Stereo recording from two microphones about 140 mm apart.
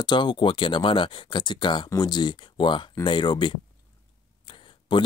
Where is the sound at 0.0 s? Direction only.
35° left (ahead or behind).